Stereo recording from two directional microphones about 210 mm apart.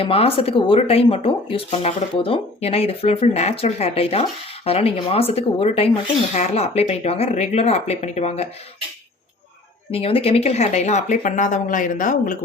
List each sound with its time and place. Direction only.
0.0 s speech: 25° left (ahead or behind)
9.9 s speech: 25° left (ahead or behind)